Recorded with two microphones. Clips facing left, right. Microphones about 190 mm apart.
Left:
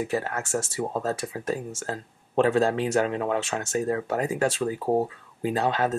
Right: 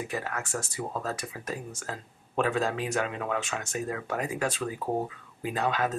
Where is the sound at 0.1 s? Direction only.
30° left (ahead or behind).